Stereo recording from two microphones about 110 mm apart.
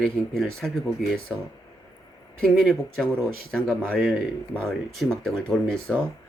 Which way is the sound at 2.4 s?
5° left (ahead or behind).